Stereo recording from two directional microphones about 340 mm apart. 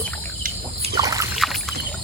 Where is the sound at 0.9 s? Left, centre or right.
Centre.